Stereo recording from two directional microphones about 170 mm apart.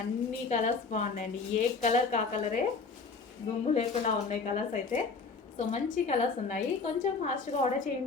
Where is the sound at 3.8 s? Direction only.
45° left (ahead or behind).